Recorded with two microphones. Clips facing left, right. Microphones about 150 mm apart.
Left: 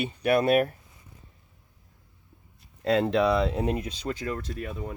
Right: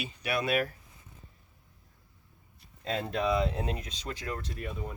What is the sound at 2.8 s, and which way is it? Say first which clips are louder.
Speech: left 8 dB; 80° left.